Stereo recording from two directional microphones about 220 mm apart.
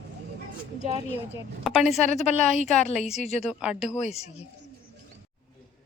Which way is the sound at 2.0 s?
30° left (ahead or behind).